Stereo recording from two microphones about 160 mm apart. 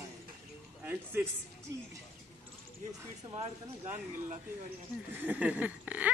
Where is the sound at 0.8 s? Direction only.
15° right (ahead or behind).